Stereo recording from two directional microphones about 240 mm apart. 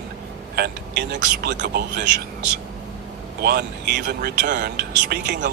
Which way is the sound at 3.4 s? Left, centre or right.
Right.